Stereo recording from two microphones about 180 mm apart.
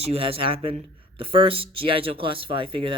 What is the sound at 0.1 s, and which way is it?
Speech, 30° right (ahead or behind).